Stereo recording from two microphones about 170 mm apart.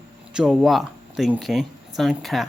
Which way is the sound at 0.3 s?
5° right (ahead or behind).